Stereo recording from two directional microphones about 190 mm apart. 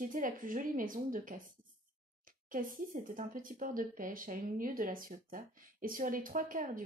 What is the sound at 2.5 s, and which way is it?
Speech, 45° right (ahead or behind).